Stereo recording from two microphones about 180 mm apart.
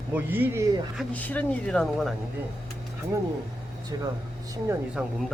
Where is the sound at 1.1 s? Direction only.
10° left (ahead or behind).